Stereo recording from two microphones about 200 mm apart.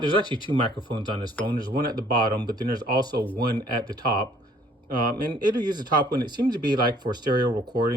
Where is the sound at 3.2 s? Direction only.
10° left (ahead or behind).